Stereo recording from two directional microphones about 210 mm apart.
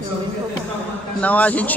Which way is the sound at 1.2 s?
5° left (ahead or behind).